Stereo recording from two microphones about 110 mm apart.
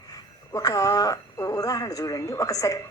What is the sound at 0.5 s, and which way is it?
A woman's voice, 30° left (ahead or behind).